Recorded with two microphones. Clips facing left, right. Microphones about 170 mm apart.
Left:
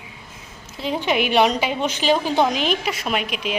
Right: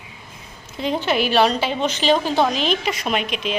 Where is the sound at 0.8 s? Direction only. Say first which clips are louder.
Right 1 dB; 10° left (ahead or behind).